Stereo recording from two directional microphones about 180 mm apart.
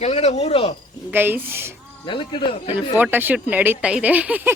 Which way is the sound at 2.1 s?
30° left (ahead or behind).